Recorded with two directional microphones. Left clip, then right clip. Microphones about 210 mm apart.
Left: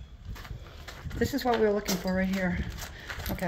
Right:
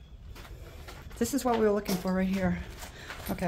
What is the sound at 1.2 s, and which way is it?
Speech, 20° right (ahead or behind).